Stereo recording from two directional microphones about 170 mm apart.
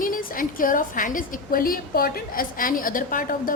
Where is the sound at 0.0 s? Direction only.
55° left (ahead or behind).